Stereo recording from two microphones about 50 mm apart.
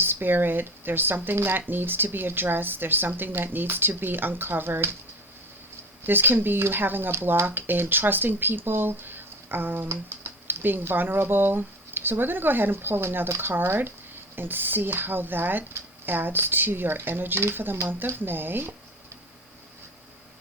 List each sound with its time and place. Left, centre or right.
0.0 s speech: right
6.0 s speech: right